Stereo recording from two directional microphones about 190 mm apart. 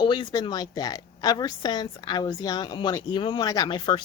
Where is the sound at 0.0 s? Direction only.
25° left (ahead or behind).